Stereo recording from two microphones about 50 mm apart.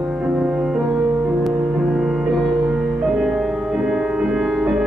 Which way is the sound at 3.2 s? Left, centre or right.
Centre.